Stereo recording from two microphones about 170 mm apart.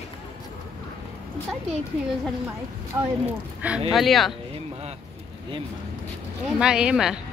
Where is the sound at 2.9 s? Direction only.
15° right (ahead or behind).